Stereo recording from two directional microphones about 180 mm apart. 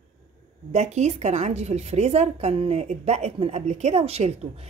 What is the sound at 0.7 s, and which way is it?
A woman's voice, 40° right (ahead or behind).